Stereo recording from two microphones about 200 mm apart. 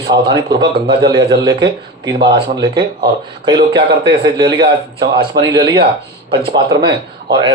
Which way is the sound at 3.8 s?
50° right (ahead or behind).